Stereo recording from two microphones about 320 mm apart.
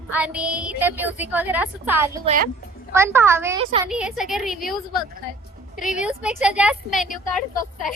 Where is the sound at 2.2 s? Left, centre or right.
Right.